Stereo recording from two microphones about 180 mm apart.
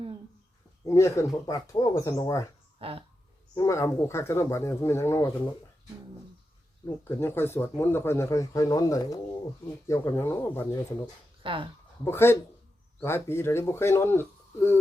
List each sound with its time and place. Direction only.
0.9 s speech: 15° left (ahead or behind)
2.7 s speech: 30° right (ahead or behind)
3.5 s speech: 15° left (ahead or behind)
7.0 s speech: 15° left (ahead or behind)
11.4 s speech: 30° right (ahead or behind)
12.0 s speech: 15° left (ahead or behind)